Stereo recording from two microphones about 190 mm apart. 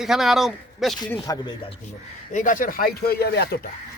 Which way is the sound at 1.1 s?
20° left (ahead or behind).